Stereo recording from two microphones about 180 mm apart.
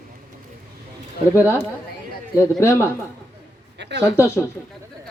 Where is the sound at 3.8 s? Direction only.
75° right (ahead or behind).